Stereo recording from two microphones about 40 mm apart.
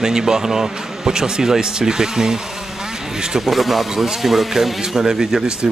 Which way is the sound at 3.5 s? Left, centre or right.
Centre.